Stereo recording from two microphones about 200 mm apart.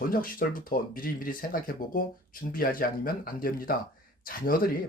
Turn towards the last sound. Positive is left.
turn(degrees=45)  # may be behind; listen again after turning